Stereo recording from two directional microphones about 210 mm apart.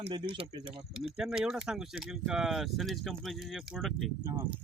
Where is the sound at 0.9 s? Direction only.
5° right (ahead or behind).